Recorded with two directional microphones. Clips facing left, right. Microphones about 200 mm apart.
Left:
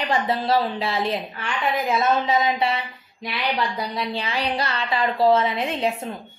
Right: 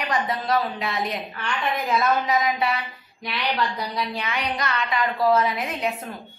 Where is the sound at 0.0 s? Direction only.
30° left (ahead or behind).